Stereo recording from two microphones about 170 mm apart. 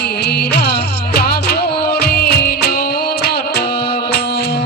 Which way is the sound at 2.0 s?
65° left (ahead or behind).